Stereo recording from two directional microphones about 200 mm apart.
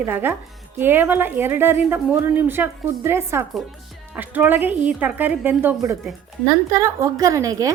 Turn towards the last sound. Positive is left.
turn(degrees=-15)  # may be behind; listen again after turning